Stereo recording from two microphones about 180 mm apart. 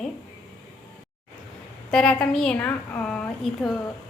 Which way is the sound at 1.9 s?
5° left (ahead or behind).